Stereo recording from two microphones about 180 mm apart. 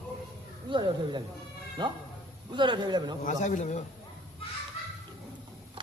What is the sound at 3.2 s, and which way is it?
Speech, 45° left (ahead or behind).